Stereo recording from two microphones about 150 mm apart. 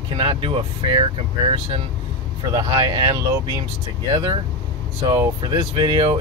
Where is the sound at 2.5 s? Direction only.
35° right (ahead or behind).